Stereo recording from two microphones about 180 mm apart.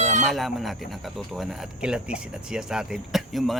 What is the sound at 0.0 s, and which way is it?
Chicken, 40° right (ahead or behind).